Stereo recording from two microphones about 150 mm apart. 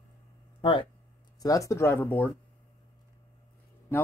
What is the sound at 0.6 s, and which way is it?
Speech, 35° left (ahead or behind).